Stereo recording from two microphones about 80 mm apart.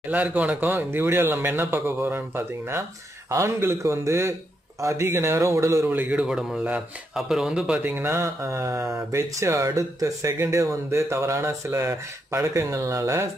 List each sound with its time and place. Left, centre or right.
0.1 s speech: centre; by 5.9 s right
5.9 s speech: centre
6.2 s speech: centre
7.8 s speech: right